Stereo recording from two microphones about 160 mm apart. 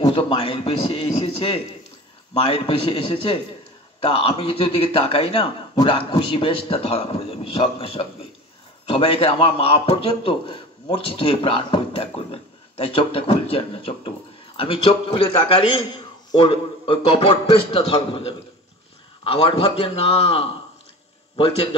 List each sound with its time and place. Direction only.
0.0 s a man's voice: 35° left (ahead or behind)